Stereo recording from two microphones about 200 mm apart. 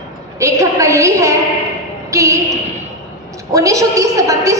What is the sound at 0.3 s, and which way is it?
A woman's voice, 15° right (ahead or behind).